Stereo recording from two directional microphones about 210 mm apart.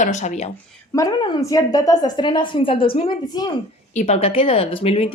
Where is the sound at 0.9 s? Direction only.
15° left (ahead or behind).